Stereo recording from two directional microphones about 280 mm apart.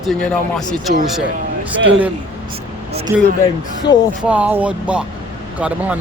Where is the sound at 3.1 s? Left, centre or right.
Centre.